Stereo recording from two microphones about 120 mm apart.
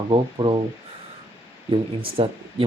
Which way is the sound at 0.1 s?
45° right (ahead or behind).